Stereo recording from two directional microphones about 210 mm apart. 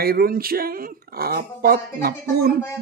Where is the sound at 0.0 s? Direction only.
45° right (ahead or behind).